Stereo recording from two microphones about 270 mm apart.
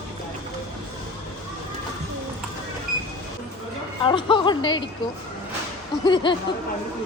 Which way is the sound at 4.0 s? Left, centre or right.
Centre.